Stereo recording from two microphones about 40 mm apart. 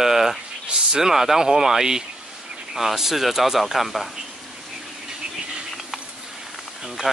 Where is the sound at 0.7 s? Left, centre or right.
Centre.